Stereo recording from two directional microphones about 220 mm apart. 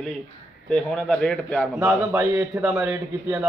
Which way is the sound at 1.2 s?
5° left (ahead or behind).